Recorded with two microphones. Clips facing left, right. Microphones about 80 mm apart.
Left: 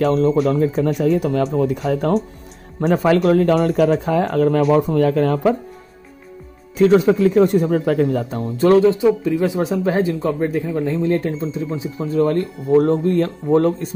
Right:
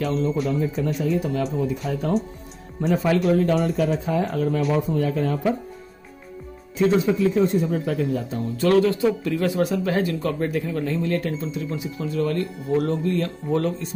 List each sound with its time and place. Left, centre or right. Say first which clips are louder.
0.0 s speech: left 8 dB; left
2.8 s speech: left 5 dB; left
3.3 s speech: left 4 dB; left
3.5 s speech: left 6 dB; left
4.7 s speech: left 7 dB; left
6.8 s speech: left 6 dB; left
8.6 s speech: left 6 dB; left